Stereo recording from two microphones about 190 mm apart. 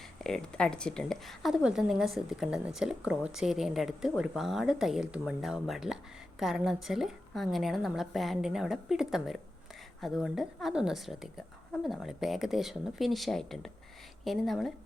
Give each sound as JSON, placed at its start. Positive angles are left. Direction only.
{"t": 0.0, "sound": "a woman's voice", "side_deg": 0}